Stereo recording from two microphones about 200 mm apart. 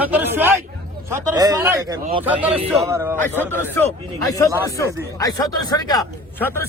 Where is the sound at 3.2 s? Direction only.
10° left (ahead or behind).